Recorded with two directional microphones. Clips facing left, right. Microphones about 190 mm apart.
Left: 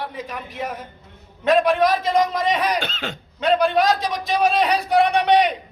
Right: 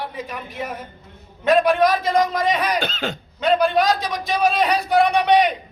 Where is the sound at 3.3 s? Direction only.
Centre (ahead or behind).